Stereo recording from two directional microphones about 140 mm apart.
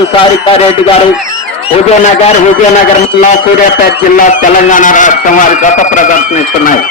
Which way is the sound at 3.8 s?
75° left (ahead or behind).